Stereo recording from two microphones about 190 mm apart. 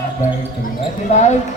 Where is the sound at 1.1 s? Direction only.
40° left (ahead or behind).